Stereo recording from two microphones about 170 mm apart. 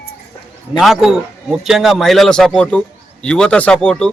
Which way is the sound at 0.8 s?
Centre (ahead or behind).